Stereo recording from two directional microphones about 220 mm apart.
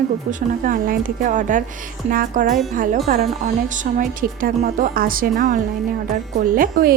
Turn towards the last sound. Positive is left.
turn(degrees=-40)  # may be behind; listen again after turning